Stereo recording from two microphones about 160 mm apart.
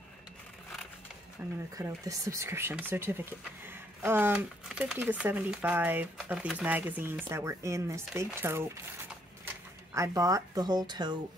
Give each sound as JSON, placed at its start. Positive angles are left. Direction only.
{"t": 1.4, "sound": "speech", "side_deg": -10}